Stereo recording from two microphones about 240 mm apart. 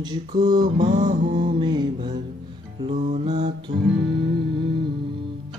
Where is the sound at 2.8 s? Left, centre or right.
Right.